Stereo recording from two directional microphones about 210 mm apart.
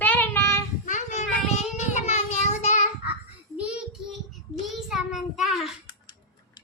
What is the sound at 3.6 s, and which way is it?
Child singing, 5° right (ahead or behind).